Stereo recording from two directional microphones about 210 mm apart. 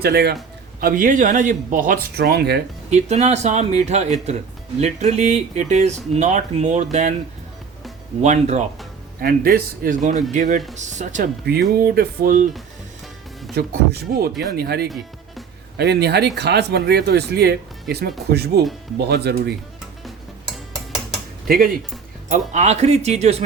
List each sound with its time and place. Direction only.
0.0 s speech: 50° right (ahead or behind)
2.9 s speech: 30° right (ahead or behind)
8.2 s speech: 35° right (ahead or behind)
9.2 s speech: 45° right (ahead or behind)
13.6 s speech: 45° right (ahead or behind)
21.4 s speech: 45° right (ahead or behind)
22.3 s speech: 35° right (ahead or behind)